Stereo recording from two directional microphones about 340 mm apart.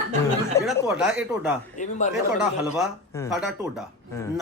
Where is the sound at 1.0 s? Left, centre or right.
Centre.